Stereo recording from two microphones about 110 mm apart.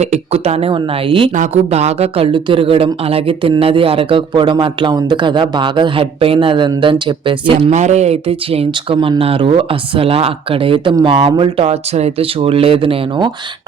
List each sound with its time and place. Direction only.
0.0 s speech: 75° right (ahead or behind); by 1.3 s 50° right (ahead or behind)
1.4 s speech: 75° right (ahead or behind); by 7.7 s 50° right (ahead or behind)
7.7 s speech: 90° right; by 13.3 s 45° right (ahead or behind)